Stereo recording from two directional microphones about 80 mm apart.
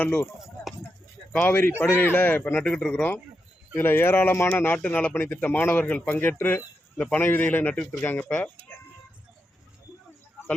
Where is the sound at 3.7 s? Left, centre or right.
Left.